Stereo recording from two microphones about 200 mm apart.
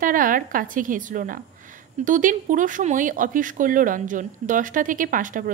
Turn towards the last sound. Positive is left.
turn(degrees=-40)  # may be behind; listen again after turning